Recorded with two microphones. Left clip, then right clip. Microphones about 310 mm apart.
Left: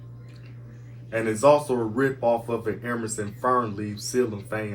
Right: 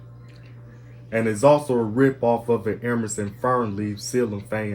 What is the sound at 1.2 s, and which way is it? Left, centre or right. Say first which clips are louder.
Speech: right 1 dB; right.